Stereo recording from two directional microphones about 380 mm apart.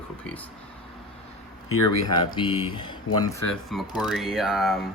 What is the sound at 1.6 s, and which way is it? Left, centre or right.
Speech, left.